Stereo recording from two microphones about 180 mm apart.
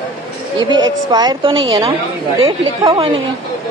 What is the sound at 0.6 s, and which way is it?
A woman's voice, 25° right (ahead or behind).